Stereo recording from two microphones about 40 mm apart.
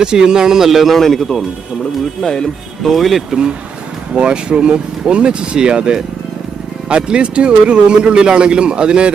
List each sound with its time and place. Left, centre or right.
0.0 s a man's voice: centre
0.9 s speech: centre
2.9 s speech: centre
4.1 s speech: right